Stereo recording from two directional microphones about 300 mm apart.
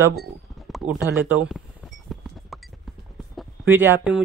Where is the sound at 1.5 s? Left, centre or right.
Centre.